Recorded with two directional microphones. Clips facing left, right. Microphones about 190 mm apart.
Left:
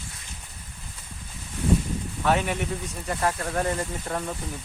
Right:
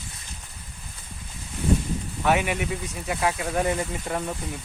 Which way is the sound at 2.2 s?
10° right (ahead or behind).